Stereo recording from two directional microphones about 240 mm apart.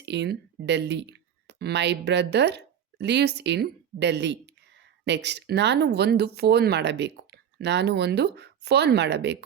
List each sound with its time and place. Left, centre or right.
0.0 s speech: right